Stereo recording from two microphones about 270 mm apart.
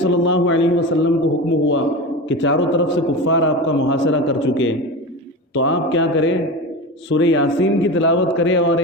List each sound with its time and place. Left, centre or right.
0.0 s a man's voice: left